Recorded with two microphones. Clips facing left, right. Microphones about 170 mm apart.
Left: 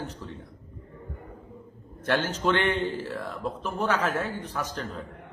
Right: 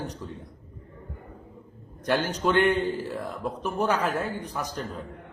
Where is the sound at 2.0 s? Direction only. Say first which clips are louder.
Right 1 dB; 10° right (ahead or behind).